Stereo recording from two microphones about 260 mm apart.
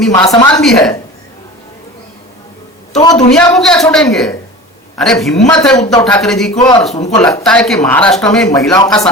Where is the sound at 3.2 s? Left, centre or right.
Centre.